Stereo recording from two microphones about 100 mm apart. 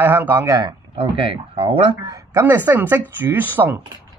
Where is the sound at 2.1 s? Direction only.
30° right (ahead or behind).